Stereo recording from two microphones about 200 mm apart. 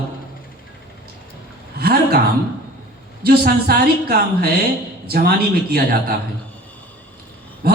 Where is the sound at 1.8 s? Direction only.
50° right (ahead or behind).